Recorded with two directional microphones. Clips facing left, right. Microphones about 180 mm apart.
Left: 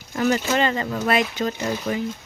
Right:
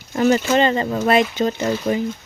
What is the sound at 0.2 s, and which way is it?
Speech, 25° right (ahead or behind).